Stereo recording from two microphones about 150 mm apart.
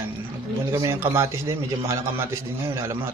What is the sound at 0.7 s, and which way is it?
A man's voice, 20° right (ahead or behind).